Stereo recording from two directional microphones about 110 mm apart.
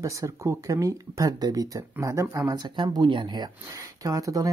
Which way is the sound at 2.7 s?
45° right (ahead or behind).